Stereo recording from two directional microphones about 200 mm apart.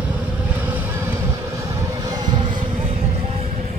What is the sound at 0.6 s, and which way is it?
Vehicle, 10° right (ahead or behind).